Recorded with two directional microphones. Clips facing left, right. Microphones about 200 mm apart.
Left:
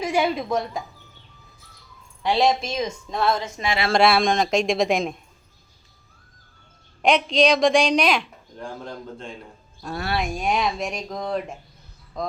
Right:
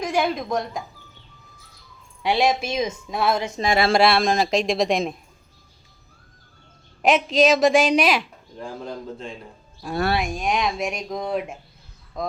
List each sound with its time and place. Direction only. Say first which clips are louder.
0.0 s speech: left 1 dB; 5° left (ahead or behind)
2.2 s speech: even; 5° right (ahead or behind)
3.6 s speech: right 5 dB; 40° right (ahead or behind)
3.9 s speech: left 3 dB; centre (ahead or behind)
7.0 s speech: right 1 dB; 5° right (ahead or behind)